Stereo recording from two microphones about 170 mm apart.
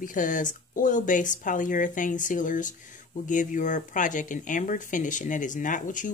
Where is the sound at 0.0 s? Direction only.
50° left (ahead or behind).